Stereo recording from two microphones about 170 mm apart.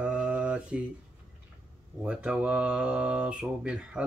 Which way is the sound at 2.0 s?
5° right (ahead or behind).